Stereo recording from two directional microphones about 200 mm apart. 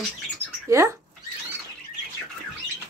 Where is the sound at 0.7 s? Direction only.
15° right (ahead or behind).